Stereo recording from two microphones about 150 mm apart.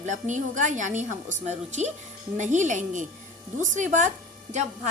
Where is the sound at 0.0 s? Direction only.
55° right (ahead or behind).